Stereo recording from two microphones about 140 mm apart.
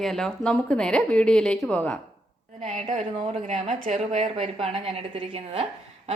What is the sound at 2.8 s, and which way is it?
Speech, 55° right (ahead or behind).